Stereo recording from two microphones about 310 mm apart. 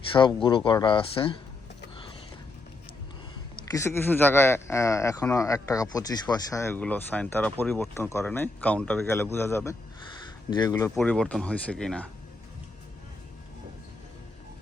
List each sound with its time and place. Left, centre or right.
0.1 s speech: centre
3.7 s speech: centre